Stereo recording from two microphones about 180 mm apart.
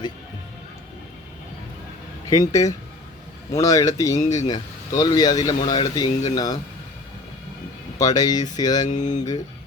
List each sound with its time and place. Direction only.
2.3 s speech: 20° left (ahead or behind)
7.9 s speech: 20° left (ahead or behind)
8.9 s speech: 40° left (ahead or behind)